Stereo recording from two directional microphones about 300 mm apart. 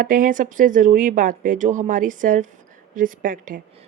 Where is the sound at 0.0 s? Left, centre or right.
Right.